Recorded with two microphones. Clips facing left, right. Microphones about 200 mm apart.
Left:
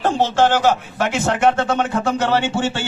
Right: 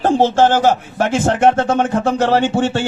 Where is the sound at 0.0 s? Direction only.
45° right (ahead or behind).